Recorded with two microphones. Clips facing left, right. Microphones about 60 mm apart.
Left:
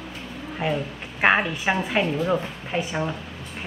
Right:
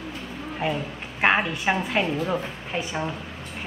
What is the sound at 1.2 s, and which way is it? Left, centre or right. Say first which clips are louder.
A woman's voice: left 1 dB; centre.